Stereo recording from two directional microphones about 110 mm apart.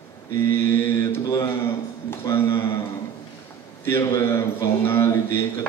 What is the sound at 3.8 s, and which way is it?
A man's voice, 20° left (ahead or behind).